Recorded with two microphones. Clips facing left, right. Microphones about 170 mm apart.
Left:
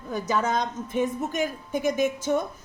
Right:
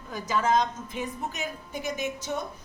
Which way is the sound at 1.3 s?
50° left (ahead or behind).